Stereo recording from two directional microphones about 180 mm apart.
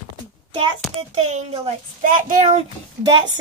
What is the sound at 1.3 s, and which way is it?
Speech, 40° right (ahead or behind).